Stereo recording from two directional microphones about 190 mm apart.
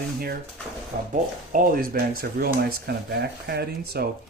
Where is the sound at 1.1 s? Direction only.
45° right (ahead or behind).